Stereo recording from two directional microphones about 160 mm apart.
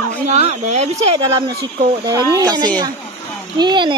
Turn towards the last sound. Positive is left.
turn(degrees=-30)  # may be behind; listen again after turning